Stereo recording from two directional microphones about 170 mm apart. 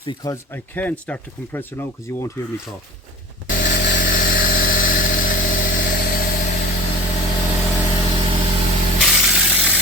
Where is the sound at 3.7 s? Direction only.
90° left.